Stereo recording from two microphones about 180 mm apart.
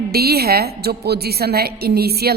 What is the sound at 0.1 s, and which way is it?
A woman's voice, 60° right (ahead or behind).